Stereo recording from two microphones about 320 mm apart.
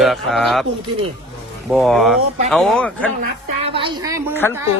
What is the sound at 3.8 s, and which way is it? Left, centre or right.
Speech, centre.